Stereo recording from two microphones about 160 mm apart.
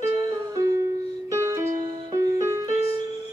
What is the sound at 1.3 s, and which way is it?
Music, 20° right (ahead or behind).